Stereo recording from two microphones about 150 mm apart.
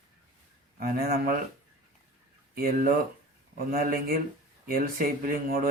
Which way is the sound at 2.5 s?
70° right (ahead or behind).